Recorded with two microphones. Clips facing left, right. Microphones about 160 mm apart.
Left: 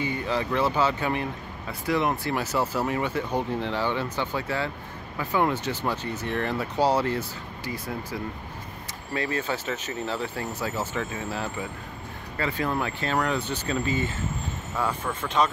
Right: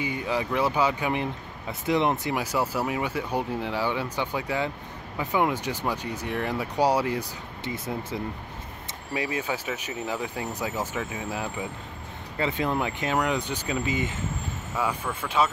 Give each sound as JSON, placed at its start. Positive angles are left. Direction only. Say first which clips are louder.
{"t": 0.0, "sound": "speech", "louder": "left 1 dB", "side_deg": -10}
{"t": 7.6, "sound": "speech", "louder": "right 1 dB", "side_deg": -25}
{"t": 9.1, "sound": "speech", "louder": "left 1 dB", "side_deg": -15}